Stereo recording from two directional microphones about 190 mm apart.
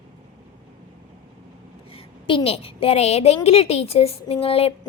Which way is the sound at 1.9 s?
30° left (ahead or behind).